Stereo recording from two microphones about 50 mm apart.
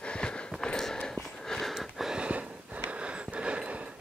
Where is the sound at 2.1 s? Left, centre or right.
Right.